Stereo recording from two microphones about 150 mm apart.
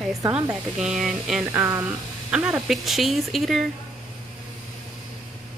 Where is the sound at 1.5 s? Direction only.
15° right (ahead or behind).